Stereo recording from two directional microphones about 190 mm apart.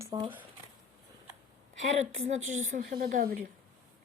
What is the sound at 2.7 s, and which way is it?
Speech, 50° right (ahead or behind).